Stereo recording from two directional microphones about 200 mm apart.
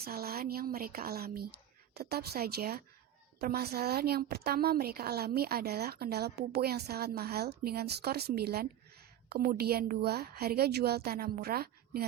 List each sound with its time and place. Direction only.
0.0 s a woman's voice: 50° right (ahead or behind)